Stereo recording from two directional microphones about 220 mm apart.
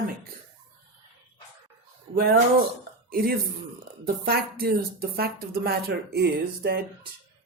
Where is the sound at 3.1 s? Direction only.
45° right (ahead or behind).